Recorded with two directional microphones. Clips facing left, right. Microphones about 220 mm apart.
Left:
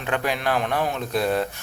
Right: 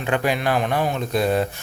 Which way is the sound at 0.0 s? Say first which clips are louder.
Right 3 dB; 5° right (ahead or behind).